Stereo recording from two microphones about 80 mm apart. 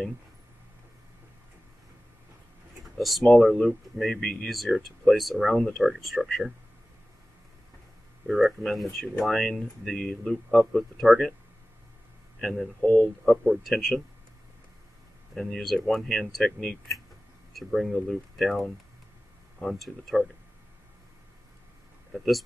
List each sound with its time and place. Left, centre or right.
3.0 s speech: centre
8.3 s speech: centre
12.4 s speech: centre
12.8 s speech: centre
13.5 s speech: centre
15.3 s speech: centre
22.1 s speech: centre